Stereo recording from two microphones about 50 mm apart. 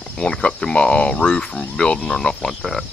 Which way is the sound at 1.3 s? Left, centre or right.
Centre.